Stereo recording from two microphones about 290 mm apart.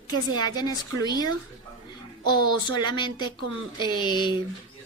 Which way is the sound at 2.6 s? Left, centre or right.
Centre.